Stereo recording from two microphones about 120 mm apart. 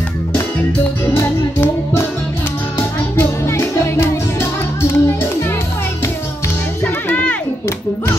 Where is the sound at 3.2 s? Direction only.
20° left (ahead or behind).